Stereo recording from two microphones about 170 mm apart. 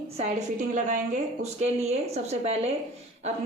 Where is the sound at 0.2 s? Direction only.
45° right (ahead or behind).